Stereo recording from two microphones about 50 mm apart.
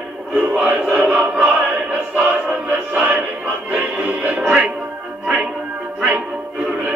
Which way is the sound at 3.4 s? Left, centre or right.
Right.